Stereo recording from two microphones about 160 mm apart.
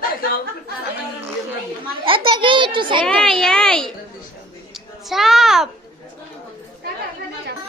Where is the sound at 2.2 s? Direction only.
30° right (ahead or behind).